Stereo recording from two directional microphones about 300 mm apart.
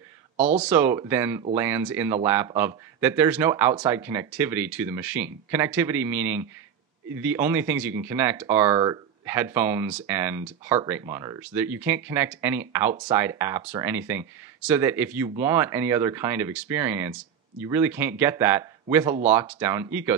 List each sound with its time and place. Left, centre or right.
0.4 s speech: right
0.7 s speech: centre